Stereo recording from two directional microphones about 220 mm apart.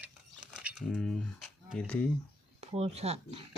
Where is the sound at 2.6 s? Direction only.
30° right (ahead or behind).